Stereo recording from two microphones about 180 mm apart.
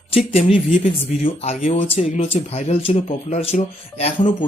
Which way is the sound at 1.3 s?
35° left (ahead or behind).